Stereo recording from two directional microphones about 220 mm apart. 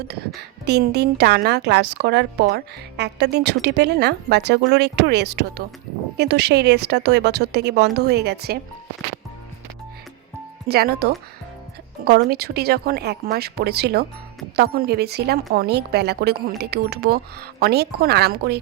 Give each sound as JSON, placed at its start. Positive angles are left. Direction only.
{"t": 0.3, "sound": "a woman's voice", "side_deg": -50}
{"t": 10.7, "sound": "a woman's voice", "side_deg": -45}